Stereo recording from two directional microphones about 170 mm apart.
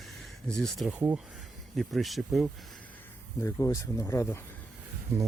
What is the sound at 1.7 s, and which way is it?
Speech, centre (ahead or behind).